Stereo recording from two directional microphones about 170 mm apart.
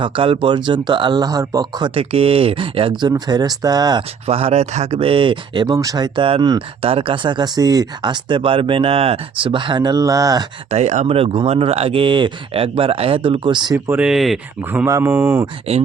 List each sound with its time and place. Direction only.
0.0 s speech: 30° right (ahead or behind)
4.3 s speech: 35° right (ahead or behind)
10.7 s speech: 40° right (ahead or behind)
13.7 s speech: 10° right (ahead or behind)
14.6 s speech: 10° right (ahead or behind)
15.7 s speech: 40° right (ahead or behind)